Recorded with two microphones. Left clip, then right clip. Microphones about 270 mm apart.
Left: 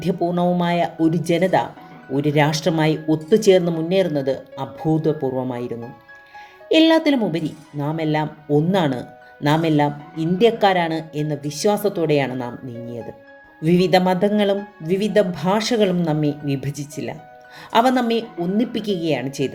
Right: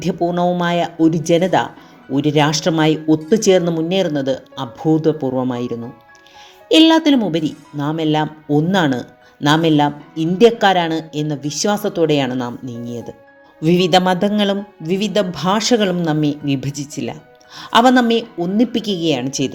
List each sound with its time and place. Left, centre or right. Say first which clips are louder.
0.0 s a woman's voice: right 3 dB; centre